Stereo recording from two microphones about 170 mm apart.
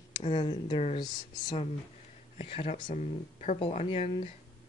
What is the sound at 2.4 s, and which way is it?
Speech, 35° left (ahead or behind).